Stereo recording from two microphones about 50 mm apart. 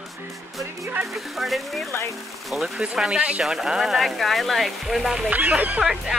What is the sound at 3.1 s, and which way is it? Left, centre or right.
Speech, right.